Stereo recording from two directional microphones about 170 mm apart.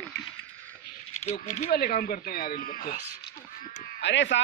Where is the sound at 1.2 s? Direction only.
40° left (ahead or behind).